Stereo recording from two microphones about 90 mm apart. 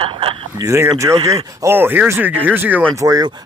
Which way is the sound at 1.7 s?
20° right (ahead or behind).